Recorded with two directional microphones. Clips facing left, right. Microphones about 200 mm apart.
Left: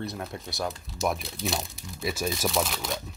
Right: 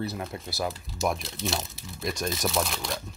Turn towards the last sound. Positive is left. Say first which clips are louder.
# even
turn(degrees=0)  # may be behind; listen again after turning